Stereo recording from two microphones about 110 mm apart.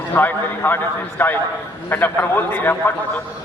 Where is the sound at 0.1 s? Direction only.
20° left (ahead or behind).